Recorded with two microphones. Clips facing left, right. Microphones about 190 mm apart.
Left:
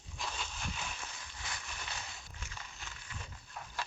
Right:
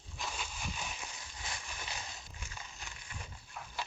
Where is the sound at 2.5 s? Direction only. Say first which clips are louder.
Right 1 dB; 15° right (ahead or behind).